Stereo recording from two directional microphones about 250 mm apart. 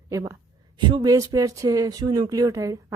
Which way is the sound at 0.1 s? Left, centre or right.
Centre.